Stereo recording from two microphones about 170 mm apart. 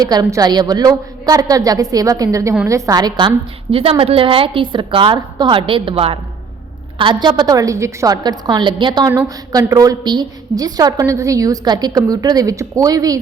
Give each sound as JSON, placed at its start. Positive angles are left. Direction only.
{"t": 0.0, "sound": "a woman's voice", "side_deg": -20}